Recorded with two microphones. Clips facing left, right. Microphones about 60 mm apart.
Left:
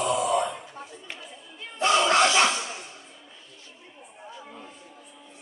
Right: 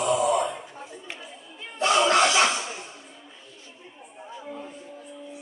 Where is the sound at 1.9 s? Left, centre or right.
Centre.